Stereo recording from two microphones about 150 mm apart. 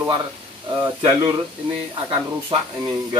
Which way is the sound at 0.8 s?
30° right (ahead or behind).